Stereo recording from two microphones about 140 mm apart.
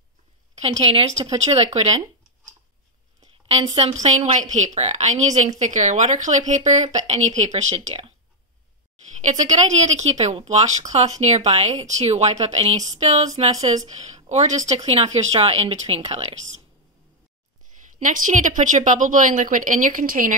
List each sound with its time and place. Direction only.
0.6 s a woman's voice: 40° right (ahead or behind)
4.0 s a woman's voice: 50° right (ahead or behind)
9.2 s speech: 60° right (ahead or behind)
13.9 s a woman's voice: 55° right (ahead or behind)
17.9 s a woman's voice: 65° right (ahead or behind)